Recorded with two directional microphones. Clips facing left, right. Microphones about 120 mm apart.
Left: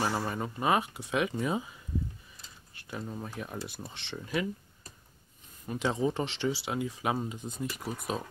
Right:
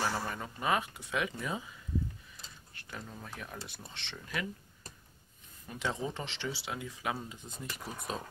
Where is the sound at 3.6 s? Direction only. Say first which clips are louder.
Left 6 dB; 10° left (ahead or behind).